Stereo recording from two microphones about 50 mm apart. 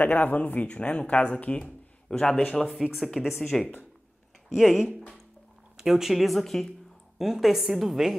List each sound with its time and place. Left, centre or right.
0.0 s speech: left
2.0 s a man's voice: centre
2.7 s a woman's voice: centre
4.6 s a woman's voice: centre
7.2 s a woman's voice: centre